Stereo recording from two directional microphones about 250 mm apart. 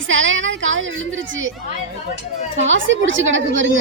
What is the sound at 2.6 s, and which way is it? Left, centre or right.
A woman's voice, right.